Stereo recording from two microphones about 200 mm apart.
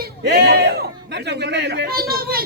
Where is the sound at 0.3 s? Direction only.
55° right (ahead or behind).